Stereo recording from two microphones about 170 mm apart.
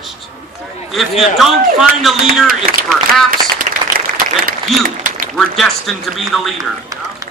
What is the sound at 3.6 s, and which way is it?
Applause, 50° right (ahead or behind).